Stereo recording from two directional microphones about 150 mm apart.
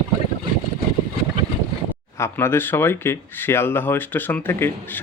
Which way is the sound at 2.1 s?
15° left (ahead or behind).